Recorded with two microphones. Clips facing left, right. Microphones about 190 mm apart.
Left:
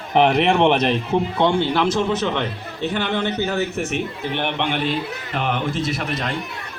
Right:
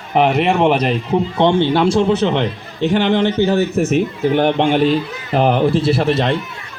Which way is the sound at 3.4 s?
40° right (ahead or behind).